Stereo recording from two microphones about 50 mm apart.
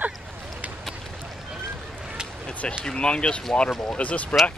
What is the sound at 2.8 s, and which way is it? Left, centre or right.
Speech, centre.